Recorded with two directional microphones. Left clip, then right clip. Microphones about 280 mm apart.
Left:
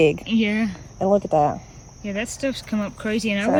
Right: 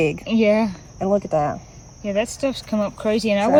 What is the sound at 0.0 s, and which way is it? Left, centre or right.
Speech, left.